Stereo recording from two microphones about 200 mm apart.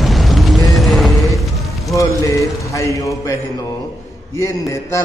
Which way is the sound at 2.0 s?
15° left (ahead or behind).